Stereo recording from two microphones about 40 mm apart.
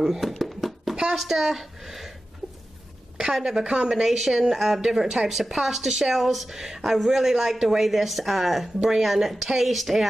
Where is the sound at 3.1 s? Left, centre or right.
Centre.